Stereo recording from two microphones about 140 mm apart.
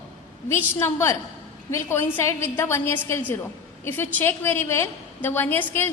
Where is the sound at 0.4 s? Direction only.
20° left (ahead or behind).